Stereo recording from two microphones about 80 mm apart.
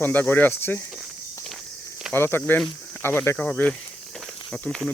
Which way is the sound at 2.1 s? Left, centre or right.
Left.